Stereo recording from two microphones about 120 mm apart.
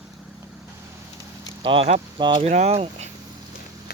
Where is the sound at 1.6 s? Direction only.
45° right (ahead or behind).